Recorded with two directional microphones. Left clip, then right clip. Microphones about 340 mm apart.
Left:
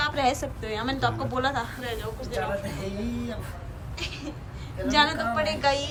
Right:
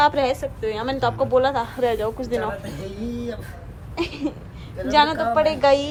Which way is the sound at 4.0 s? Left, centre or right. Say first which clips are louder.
Right 9 dB; centre.